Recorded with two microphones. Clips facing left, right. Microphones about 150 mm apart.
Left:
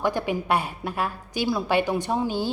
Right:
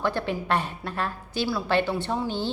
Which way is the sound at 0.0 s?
15° left (ahead or behind).